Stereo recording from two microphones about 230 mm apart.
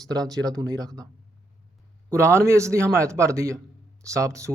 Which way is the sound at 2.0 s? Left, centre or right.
Centre.